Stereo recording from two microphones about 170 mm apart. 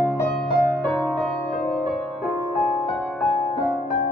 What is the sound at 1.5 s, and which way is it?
Music, 50° left (ahead or behind).